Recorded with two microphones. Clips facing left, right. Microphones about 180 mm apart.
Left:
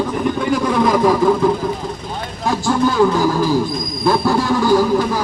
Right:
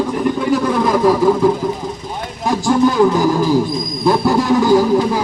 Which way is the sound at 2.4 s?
15° right (ahead or behind).